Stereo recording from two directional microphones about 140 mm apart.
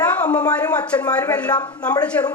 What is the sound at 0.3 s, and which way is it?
A woman's voice, 10° left (ahead or behind).